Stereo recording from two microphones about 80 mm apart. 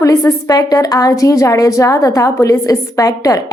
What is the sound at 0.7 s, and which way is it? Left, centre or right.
A woman's voice, left.